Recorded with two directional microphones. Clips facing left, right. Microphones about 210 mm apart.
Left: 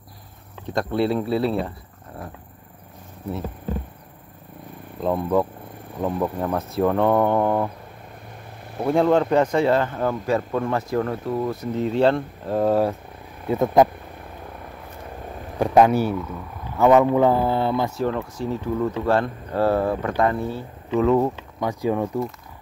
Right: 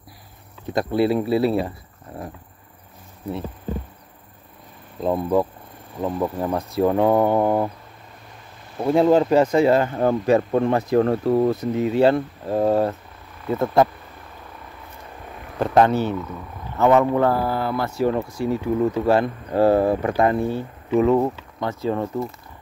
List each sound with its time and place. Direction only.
0.7 s speech: 5° right (ahead or behind)
5.0 s speech: 5° right (ahead or behind)
8.8 s speech: 5° right (ahead or behind)
10.0 s speech: 25° right (ahead or behind)
11.1 s speech: 40° right (ahead or behind)
11.7 s speech: 10° right (ahead or behind)
13.5 s speech: 15° left (ahead or behind)
15.6 s speech: 10° left (ahead or behind)
16.9 s speech: 10° left (ahead or behind)
18.1 s speech: 15° right (ahead or behind)
21.0 s speech: 5° right (ahead or behind)
21.5 s speech: 10° left (ahead or behind)